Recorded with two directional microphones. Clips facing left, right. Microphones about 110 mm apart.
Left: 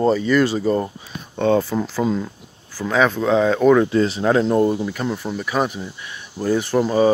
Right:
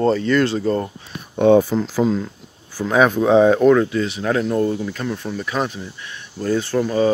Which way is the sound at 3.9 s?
35° left (ahead or behind).